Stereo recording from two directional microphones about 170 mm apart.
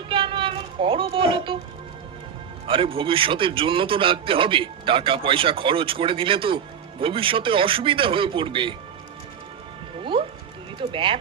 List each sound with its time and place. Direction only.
0.1 s a sound: 30° right (ahead or behind)
2.6 s a man's voice: 30° right (ahead or behind)
10.0 s music: 30° right (ahead or behind)
10.8 s speech: 30° right (ahead or behind)